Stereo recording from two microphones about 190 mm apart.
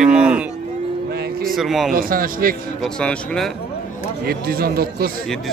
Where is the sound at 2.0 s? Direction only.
50° right (ahead or behind).